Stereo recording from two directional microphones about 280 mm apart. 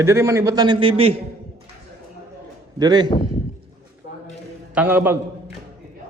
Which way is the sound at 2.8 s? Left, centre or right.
Centre.